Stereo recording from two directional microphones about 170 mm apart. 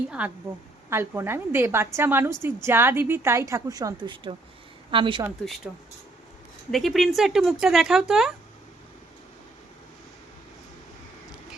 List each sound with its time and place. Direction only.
0.2 s a woman's voice: 10° right (ahead or behind); by 5.2 s 30° right (ahead or behind)
6.7 s speech: centre (ahead or behind)